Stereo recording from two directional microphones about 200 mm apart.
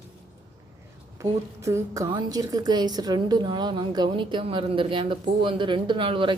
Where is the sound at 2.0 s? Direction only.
20° right (ahead or behind).